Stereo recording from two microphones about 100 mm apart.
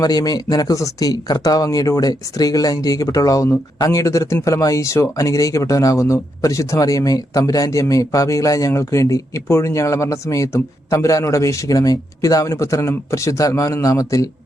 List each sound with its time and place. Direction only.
0.0 s speech: 40° left (ahead or behind)